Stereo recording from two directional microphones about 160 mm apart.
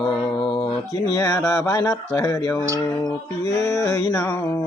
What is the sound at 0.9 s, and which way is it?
Speech, 20° left (ahead or behind).